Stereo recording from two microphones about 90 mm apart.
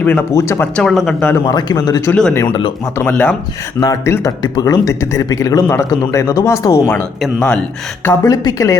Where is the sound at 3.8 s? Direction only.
40° left (ahead or behind).